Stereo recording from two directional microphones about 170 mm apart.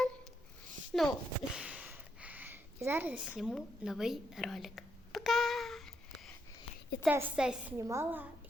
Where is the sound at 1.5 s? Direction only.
5° right (ahead or behind).